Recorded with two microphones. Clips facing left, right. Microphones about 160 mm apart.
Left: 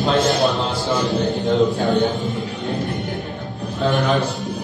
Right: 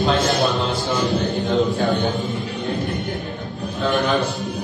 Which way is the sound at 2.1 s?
Centre (ahead or behind).